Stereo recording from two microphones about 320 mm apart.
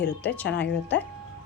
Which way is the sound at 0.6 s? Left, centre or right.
Left.